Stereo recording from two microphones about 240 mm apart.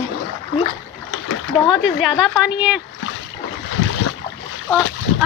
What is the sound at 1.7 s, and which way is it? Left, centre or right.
Speech, centre.